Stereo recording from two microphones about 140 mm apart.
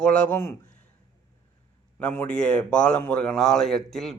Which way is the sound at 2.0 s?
10° left (ahead or behind).